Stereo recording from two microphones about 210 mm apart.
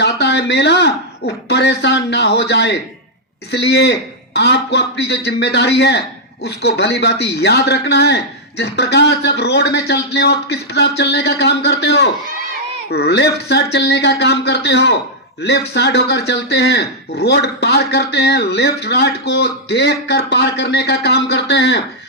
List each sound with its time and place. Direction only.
0.0 s speech: 55° left (ahead or behind)